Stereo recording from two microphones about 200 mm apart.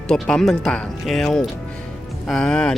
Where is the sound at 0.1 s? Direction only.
5° left (ahead or behind).